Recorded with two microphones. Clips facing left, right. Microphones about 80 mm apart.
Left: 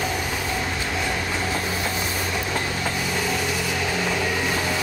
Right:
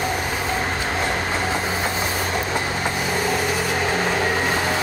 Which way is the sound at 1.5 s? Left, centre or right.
Right.